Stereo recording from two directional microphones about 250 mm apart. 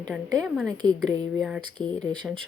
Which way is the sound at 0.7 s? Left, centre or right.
Centre.